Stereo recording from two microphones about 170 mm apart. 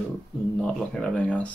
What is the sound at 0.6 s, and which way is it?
Speech, 5° left (ahead or behind).